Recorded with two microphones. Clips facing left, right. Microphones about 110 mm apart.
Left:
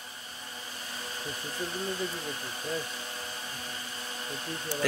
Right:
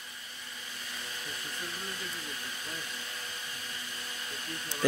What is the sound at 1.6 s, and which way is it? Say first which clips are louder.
Hair dryer: left 10 dB; 30° left (ahead or behind).